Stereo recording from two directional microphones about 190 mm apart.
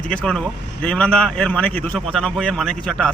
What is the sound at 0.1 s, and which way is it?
A man's voice, 5° left (ahead or behind).